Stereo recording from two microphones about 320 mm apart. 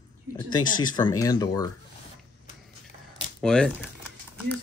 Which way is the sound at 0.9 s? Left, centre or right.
Centre.